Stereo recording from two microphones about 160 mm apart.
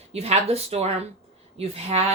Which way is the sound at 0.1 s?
40° right (ahead or behind).